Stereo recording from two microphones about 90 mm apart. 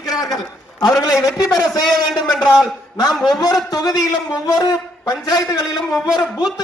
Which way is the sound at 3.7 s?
45° left (ahead or behind).